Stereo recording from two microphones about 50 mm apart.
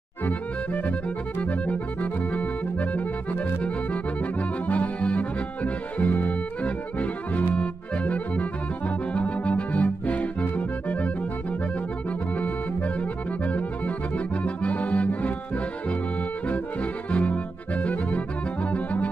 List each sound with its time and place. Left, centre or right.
0.2 s accordion: left
12.4 s accordion: left